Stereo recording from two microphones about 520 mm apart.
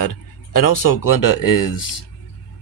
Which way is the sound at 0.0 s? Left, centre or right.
Left.